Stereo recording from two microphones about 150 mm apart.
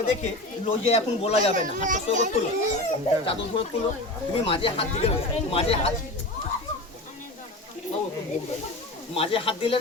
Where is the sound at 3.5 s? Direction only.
35° left (ahead or behind).